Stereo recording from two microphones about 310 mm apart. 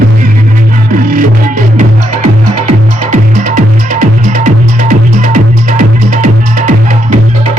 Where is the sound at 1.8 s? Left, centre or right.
Right.